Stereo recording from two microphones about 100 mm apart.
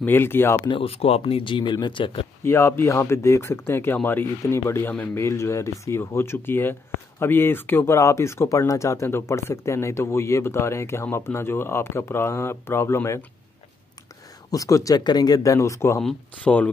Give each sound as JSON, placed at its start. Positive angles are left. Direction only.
{"t": 0.0, "sound": "speech", "side_deg": 20}
{"t": 0.7, "sound": "speech", "side_deg": 70}
{"t": 2.4, "sound": "speech", "side_deg": 25}
{"t": 14.5, "sound": "speech", "side_deg": 35}
{"t": 16.0, "sound": "speech", "side_deg": 5}